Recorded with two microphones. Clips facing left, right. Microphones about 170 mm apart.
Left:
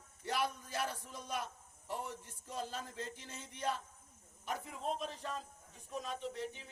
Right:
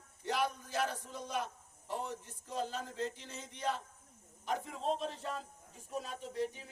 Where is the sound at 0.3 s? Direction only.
15° right (ahead or behind).